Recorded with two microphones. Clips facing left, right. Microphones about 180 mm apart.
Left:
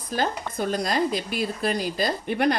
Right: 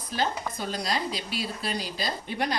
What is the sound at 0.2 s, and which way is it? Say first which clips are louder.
Speech: left 3 dB; 50° left (ahead or behind).